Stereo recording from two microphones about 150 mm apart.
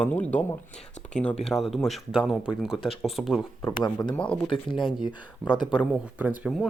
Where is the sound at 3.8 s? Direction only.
30° left (ahead or behind).